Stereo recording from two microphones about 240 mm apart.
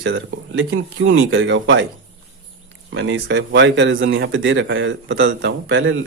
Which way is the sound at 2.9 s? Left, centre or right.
Right.